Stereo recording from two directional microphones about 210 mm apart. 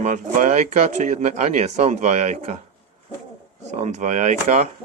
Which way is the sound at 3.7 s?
35° right (ahead or behind).